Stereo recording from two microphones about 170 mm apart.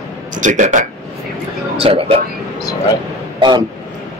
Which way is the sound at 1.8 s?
35° right (ahead or behind).